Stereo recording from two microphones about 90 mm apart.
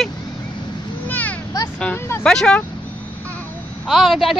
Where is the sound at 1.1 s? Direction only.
15° left (ahead or behind).